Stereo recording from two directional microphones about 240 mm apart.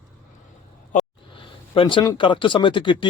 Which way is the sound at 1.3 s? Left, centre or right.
Left.